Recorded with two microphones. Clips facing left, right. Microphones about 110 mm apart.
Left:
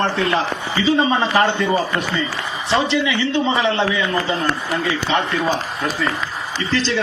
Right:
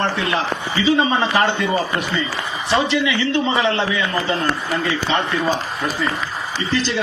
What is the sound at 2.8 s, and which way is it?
Speech, 30° left (ahead or behind).